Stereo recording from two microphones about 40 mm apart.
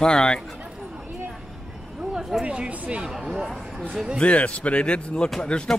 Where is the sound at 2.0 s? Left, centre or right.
Centre.